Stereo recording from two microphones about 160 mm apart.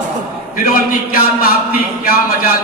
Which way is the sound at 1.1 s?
65° left (ahead or behind).